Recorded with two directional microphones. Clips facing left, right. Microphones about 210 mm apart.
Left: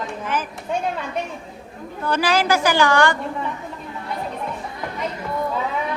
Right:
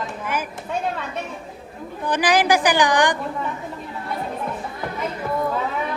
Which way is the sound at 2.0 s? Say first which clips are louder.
Right 1 dB; 15° right (ahead or behind).